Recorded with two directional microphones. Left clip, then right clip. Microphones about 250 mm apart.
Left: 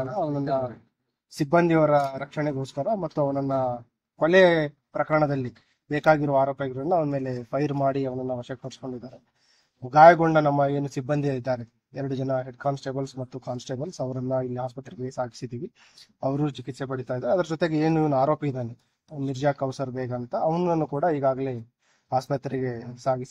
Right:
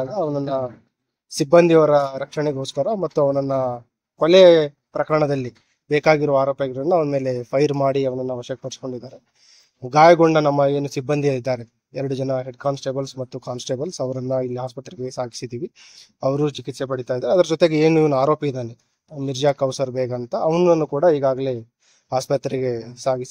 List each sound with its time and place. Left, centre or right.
0.1 s speech: right